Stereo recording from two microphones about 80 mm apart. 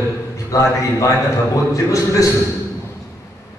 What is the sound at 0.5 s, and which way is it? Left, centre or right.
A man's voice, left.